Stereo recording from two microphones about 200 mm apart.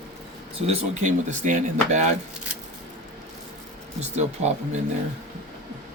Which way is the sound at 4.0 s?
35° right (ahead or behind).